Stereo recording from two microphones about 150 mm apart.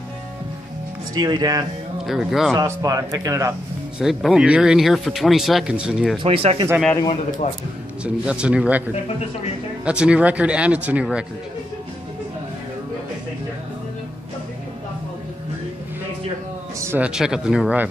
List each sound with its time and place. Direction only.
1.1 s speech: 25° right (ahead or behind)
2.0 s speech: centre (ahead or behind)
2.5 s speech: 20° right (ahead or behind)
4.0 s speech: centre (ahead or behind)
6.1 s speech: 40° right (ahead or behind)
8.0 s speech: 5° right (ahead or behind)
9.8 s speech: 5° right (ahead or behind)
16.8 s a man's voice: 15° right (ahead or behind)